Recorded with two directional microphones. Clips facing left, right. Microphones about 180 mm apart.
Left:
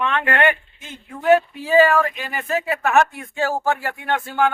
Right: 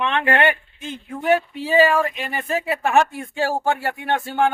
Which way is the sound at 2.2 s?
25° right (ahead or behind).